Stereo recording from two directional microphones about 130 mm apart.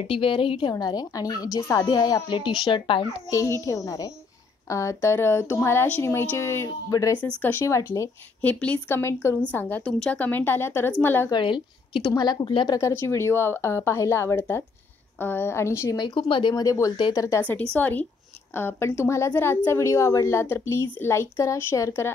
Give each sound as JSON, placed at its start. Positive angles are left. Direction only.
{"t": 0.1, "sound": "a woman's voice", "side_deg": 40}
{"t": 3.3, "sound": "a woman's voice", "side_deg": 25}
{"t": 7.2, "sound": "a woman's voice", "side_deg": 15}
{"t": 8.4, "sound": "a woman's voice", "side_deg": 10}
{"t": 11.2, "sound": "a woman's voice", "side_deg": 35}
{"t": 16.2, "sound": "a woman's voice", "side_deg": 40}
{"t": 17.4, "sound": "a woman's voice", "side_deg": 15}